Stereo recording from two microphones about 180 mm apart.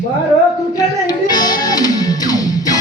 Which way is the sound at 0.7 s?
20° left (ahead or behind).